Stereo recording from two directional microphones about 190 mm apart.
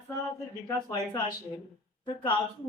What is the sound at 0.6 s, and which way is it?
A woman's voice, 20° left (ahead or behind).